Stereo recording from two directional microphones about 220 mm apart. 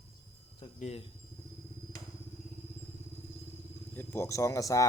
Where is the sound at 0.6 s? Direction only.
25° left (ahead or behind).